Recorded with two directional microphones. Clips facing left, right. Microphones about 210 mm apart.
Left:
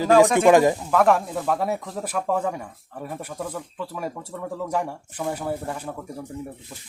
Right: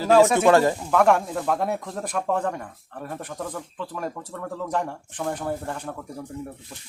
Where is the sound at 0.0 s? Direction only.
15° left (ahead or behind).